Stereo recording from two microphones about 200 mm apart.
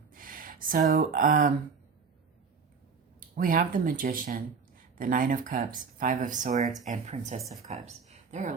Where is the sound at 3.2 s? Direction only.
45° right (ahead or behind).